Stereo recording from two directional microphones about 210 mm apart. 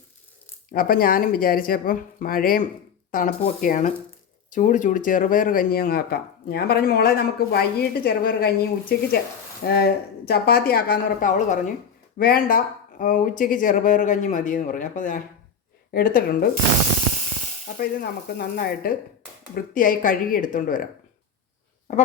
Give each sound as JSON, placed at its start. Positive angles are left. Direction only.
{"t": 0.7, "sound": "speech", "side_deg": 40}
{"t": 17.7, "sound": "speech", "side_deg": 50}